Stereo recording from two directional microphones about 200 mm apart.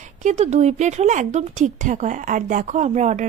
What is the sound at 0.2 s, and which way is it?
A woman's voice, 35° right (ahead or behind).